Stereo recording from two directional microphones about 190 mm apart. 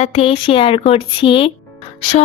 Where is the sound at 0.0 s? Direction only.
30° left (ahead or behind).